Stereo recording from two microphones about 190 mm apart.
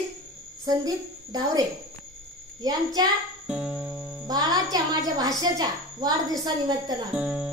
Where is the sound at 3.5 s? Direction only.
5° right (ahead or behind).